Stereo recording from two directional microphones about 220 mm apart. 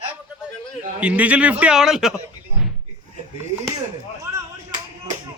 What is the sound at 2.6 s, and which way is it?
Door, 5° right (ahead or behind).